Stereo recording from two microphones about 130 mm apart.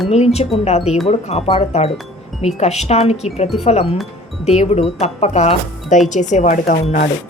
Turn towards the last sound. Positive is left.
turn(degrees=80)